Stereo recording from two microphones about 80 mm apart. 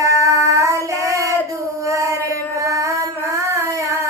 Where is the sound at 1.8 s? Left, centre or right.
Right.